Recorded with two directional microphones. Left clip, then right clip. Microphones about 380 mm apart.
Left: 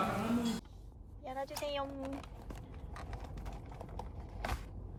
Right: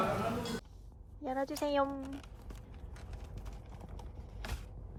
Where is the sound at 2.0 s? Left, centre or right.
Centre.